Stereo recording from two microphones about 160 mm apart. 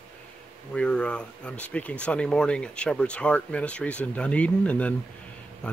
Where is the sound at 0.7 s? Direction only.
5° left (ahead or behind).